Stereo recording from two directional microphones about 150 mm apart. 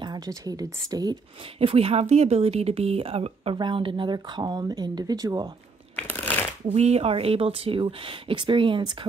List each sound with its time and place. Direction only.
0.0 s speech: 25° right (ahead or behind)
1.6 s a woman's voice: 40° right (ahead or behind)
5.9 s shuffling cards: 10° left (ahead or behind)
6.7 s a woman's voice: 45° right (ahead or behind)